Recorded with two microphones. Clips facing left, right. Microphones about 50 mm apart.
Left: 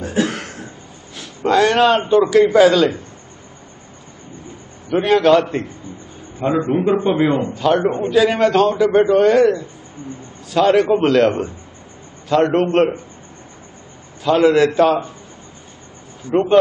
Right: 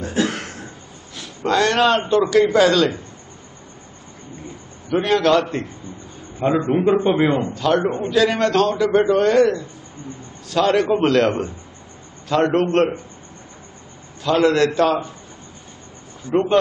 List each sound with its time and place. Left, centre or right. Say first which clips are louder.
0.0 s a sound: left 2 dB; centre
1.4 s a man's voice: left 3 dB; centre
4.8 s a man's voice: left 3 dB; centre
14.2 s a man's voice: left 3 dB; centre
16.3 s speech: left 2 dB; centre